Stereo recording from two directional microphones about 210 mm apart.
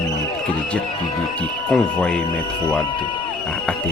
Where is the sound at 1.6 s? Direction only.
5° left (ahead or behind).